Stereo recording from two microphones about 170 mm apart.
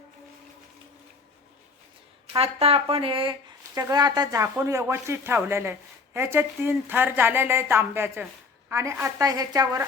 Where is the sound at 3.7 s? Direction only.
20° right (ahead or behind).